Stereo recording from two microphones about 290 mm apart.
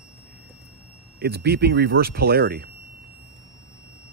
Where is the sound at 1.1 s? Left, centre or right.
Right.